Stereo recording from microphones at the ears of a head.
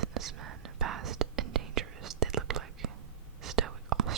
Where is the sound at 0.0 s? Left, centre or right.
Right.